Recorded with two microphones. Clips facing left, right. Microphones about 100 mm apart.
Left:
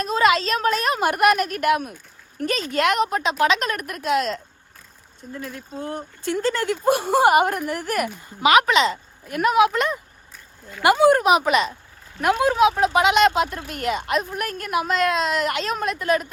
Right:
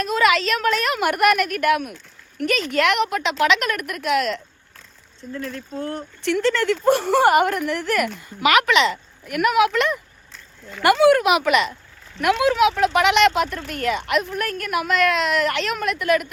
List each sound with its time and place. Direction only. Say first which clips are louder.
0.0 s speech: even; 30° left (ahead or behind)
5.4 s speech: right 3 dB; 15° left (ahead or behind)
6.2 s speech: right 3 dB; 35° left (ahead or behind)
6.7 s speech: right 1 dB; 15° left (ahead or behind)
8.4 s speech: left 1 dB; 30° left (ahead or behind)
10.3 s a sound: right 2 dB; 10° left (ahead or behind)
10.9 s speech: right 1 dB; 40° left (ahead or behind)